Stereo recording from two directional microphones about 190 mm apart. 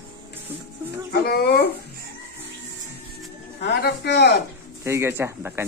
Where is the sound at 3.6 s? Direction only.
60° left (ahead or behind).